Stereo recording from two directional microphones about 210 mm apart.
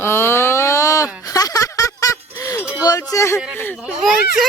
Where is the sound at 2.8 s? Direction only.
15° left (ahead or behind).